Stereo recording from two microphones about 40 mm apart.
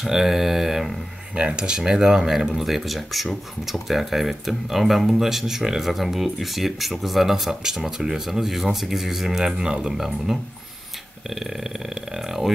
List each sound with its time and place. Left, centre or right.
0.0 s speech: centre
1.3 s speech: right; by 12.5 s centre